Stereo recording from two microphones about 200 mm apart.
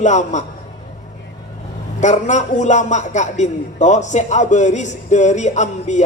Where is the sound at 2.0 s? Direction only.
35° left (ahead or behind).